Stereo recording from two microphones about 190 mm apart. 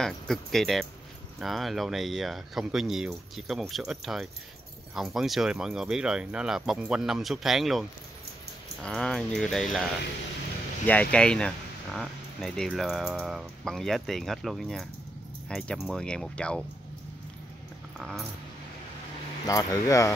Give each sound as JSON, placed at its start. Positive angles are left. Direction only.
{"t": 0.0, "sound": "speech", "side_deg": 0}
{"t": 8.8, "sound": "speech", "side_deg": 5}
{"t": 10.9, "sound": "speech", "side_deg": 5}
{"t": 17.9, "sound": "a sound", "side_deg": 0}
{"t": 19.4, "sound": "speech", "side_deg": 20}